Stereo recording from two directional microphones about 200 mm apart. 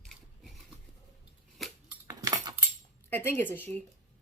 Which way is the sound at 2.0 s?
20° right (ahead or behind).